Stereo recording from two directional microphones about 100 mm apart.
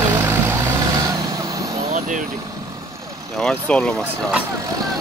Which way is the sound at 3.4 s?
10° left (ahead or behind).